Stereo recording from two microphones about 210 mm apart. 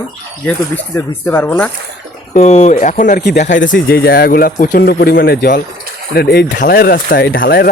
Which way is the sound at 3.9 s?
50° left (ahead or behind).